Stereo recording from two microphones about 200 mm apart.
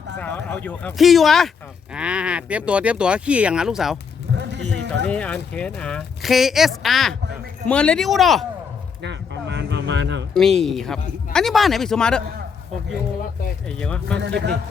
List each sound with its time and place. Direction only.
0.2 s speech: 10° left (ahead or behind)
4.4 s a sound: 60° right (ahead or behind)
5.0 s speech: 5° left (ahead or behind)
9.0 s a sound: 60° right (ahead or behind)
10.3 s speech: centre (ahead or behind)
13.7 s speech: 5° left (ahead or behind)
14.2 s speech: 60° right (ahead or behind)